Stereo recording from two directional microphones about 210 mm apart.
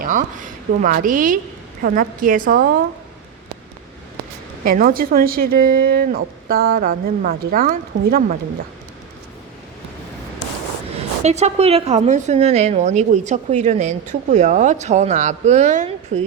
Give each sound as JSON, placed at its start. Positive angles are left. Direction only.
{"t": 0.0, "sound": "a woman's voice", "side_deg": -40}
{"t": 4.6, "sound": "a woman's voice", "side_deg": -45}
{"t": 11.2, "sound": "a woman's voice", "side_deg": -30}